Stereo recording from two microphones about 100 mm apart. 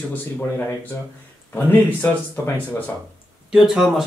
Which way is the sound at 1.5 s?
20° left (ahead or behind).